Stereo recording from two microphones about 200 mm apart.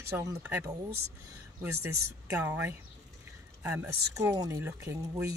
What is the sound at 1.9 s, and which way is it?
Speech, 90° right.